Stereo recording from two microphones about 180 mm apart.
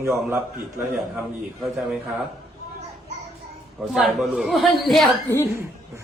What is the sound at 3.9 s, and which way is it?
A man's voice, centre (ahead or behind).